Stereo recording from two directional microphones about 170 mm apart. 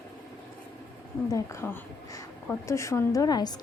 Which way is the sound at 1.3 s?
15° left (ahead or behind).